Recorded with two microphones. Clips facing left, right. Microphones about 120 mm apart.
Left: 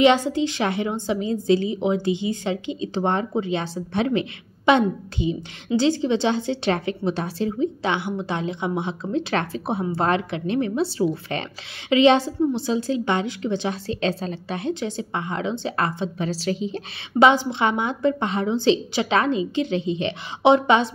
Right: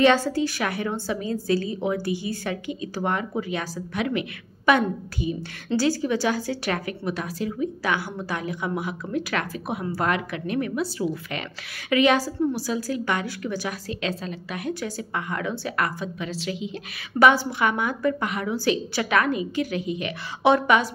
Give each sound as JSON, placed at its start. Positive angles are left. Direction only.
{"t": 0.0, "sound": "a woman's voice", "side_deg": 20}
{"t": 17.2, "sound": "a woman's voice", "side_deg": 20}